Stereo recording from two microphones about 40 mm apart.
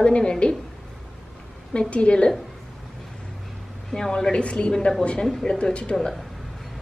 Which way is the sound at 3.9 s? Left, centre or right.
Centre.